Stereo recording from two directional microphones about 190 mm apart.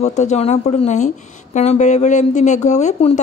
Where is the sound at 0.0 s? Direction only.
40° left (ahead or behind).